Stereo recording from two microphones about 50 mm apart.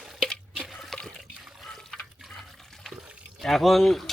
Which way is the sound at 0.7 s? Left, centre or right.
Centre.